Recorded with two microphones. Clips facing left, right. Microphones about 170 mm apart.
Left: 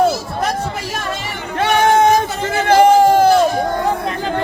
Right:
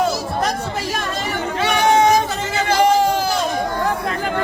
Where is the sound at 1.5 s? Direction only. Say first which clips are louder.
Left 3 dB; 55° left (ahead or behind).